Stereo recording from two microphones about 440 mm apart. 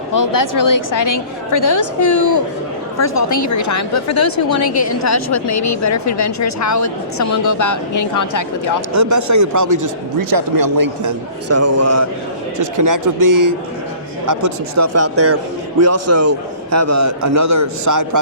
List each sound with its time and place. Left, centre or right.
0.1 s a woman's voice: left
8.9 s a man's voice: right
11.4 s a man's voice: right